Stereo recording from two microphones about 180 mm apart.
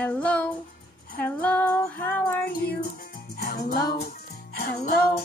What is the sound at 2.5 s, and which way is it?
Music, 60° left (ahead or behind).